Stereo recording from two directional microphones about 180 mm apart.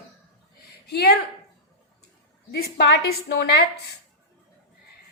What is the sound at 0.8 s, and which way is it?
Speech, 65° left (ahead or behind).